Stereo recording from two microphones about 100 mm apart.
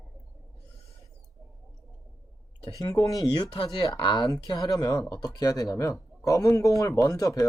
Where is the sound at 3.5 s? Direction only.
55° left (ahead or behind); by 7.5 s 35° left (ahead or behind).